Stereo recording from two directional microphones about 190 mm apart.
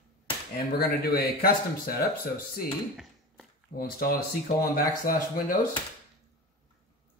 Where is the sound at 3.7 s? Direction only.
50° left (ahead or behind).